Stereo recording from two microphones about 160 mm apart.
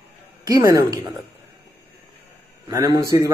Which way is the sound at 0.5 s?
20° right (ahead or behind).